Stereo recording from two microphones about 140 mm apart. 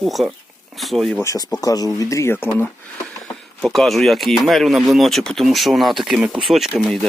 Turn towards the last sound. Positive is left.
turn(degrees=0)  # may be behind; listen again after turning